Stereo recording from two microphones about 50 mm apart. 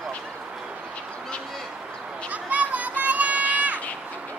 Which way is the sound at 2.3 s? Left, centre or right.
Right.